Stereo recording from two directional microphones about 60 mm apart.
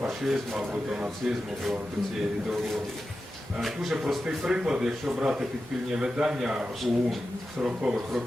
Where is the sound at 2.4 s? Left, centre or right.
Centre.